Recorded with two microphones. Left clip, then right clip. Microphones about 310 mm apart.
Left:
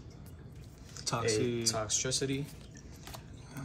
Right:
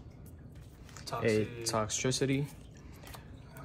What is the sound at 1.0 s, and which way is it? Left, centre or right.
Speech, left.